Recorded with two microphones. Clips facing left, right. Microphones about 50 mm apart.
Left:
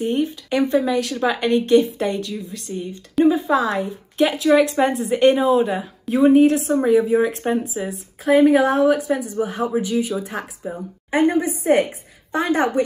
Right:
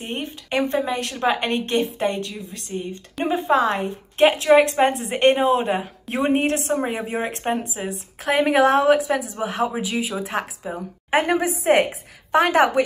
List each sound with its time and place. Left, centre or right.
0.0 s speech: right
6.0 s a woman's voice: right
8.2 s speech: right
9.8 s speech: right
10.3 s a woman's voice: right
11.1 s a woman's voice: right